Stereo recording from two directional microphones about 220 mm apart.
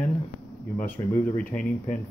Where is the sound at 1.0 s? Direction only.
15° left (ahead or behind).